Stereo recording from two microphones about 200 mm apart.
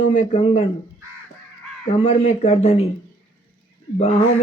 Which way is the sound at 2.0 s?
30° left (ahead or behind).